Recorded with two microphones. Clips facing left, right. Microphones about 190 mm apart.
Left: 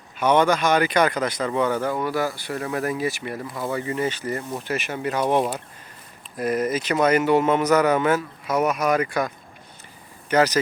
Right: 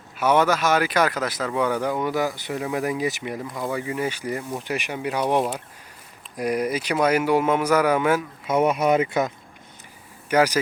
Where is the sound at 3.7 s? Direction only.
10° right (ahead or behind).